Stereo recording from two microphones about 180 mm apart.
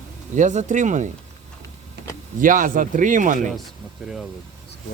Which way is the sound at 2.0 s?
70° right (ahead or behind).